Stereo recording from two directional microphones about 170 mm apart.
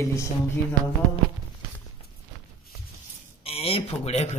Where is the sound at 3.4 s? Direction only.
35° left (ahead or behind).